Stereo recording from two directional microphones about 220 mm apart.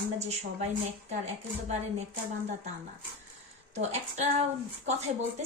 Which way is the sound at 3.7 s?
30° right (ahead or behind).